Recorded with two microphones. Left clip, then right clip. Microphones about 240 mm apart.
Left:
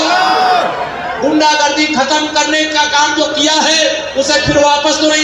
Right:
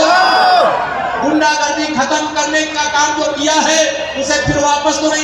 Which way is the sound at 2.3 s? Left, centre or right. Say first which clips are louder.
Left 3 dB; left.